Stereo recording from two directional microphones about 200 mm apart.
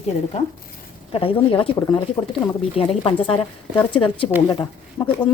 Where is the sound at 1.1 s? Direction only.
25° left (ahead or behind).